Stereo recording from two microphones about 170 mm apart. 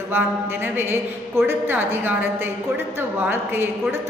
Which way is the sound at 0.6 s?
15° right (ahead or behind).